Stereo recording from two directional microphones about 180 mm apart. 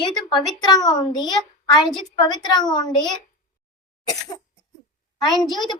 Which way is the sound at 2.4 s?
25° left (ahead or behind).